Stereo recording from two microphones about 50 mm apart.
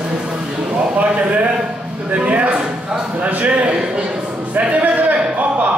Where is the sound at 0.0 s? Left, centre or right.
Centre.